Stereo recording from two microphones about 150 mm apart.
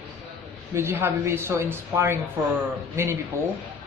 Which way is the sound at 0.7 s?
15° right (ahead or behind).